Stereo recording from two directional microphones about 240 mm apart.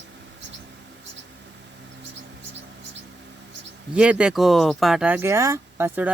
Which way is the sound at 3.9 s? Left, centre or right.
Centre.